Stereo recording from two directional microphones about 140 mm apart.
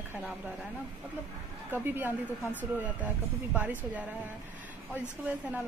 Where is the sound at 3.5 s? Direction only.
10° right (ahead or behind).